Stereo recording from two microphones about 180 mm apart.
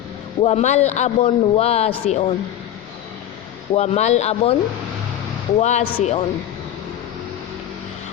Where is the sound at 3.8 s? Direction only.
35° left (ahead or behind).